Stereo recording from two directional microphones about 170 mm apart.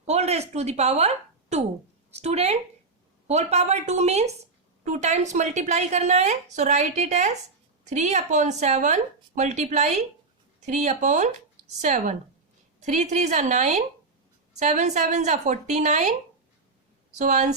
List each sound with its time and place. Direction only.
0.0 s a woman's voice: 40° right (ahead or behind)
17.2 s a woman's voice: 45° right (ahead or behind)